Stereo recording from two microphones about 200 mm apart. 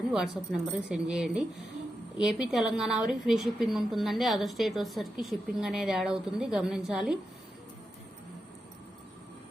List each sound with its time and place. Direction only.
0.1 s a woman's voice: centre (ahead or behind)